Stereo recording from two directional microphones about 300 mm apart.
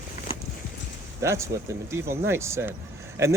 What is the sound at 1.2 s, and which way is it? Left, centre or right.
Speech, centre.